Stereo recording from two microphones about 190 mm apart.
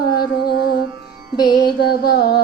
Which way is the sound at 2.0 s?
55° left (ahead or behind).